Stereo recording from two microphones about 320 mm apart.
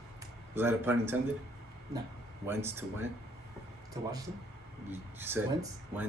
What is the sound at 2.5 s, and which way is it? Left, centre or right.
A man's voice, centre.